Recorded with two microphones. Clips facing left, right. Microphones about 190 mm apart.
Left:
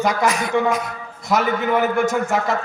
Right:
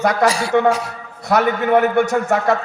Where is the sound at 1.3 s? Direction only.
65° right (ahead or behind).